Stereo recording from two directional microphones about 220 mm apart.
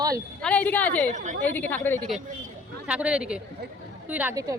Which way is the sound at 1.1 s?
35° right (ahead or behind).